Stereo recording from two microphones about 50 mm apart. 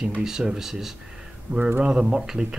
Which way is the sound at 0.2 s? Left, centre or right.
Centre.